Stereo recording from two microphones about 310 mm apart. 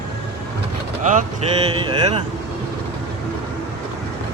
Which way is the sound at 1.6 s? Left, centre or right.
Centre.